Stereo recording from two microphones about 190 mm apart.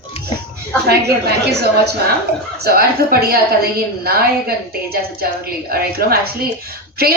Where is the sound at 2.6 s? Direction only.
55° right (ahead or behind).